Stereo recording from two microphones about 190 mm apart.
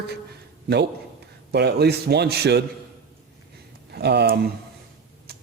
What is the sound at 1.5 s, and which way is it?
A man's voice, 60° right (ahead or behind).